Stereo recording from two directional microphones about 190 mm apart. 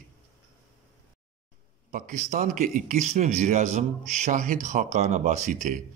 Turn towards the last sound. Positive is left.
turn(degrees=-40)  # may be behind; listen again after turning